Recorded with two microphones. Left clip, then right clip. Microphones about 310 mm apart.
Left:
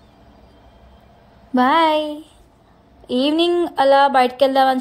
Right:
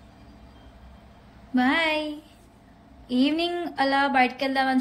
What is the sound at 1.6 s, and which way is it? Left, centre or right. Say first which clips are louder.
Speech: left 8 dB; centre.